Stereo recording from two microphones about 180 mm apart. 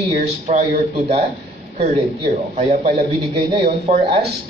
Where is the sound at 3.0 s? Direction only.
30° right (ahead or behind).